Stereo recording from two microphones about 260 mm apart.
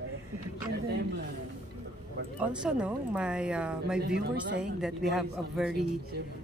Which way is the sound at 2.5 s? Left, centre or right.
Centre.